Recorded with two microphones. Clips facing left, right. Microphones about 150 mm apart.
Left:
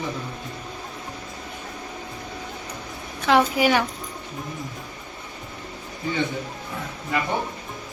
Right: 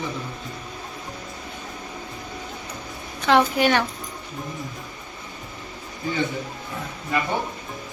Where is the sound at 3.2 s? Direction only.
5° left (ahead or behind).